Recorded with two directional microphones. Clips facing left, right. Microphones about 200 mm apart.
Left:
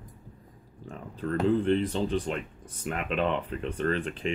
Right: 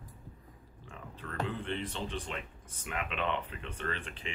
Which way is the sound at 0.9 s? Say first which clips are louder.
Left 13 dB; 40° left (ahead or behind).